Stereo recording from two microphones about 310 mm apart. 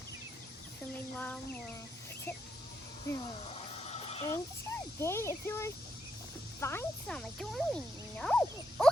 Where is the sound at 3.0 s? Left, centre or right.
Centre.